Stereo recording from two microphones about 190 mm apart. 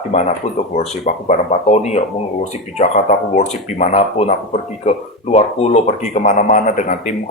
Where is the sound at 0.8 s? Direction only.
35° left (ahead or behind).